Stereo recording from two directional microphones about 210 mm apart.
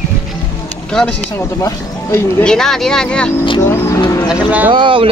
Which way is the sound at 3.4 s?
15° left (ahead or behind).